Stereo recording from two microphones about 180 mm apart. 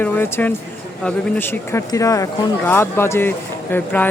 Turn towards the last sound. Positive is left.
turn(degrees=10)  # may be behind; listen again after turning